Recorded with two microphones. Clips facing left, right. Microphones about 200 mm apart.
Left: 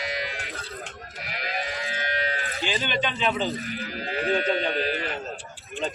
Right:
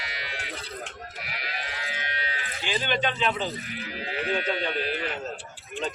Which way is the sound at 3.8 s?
40° left (ahead or behind).